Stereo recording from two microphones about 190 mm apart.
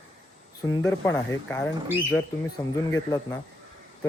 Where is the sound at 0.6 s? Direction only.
20° left (ahead or behind).